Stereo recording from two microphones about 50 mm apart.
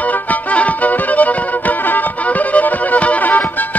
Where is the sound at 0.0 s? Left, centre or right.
Left.